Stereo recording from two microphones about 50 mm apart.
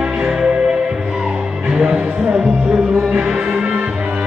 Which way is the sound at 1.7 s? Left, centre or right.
Centre.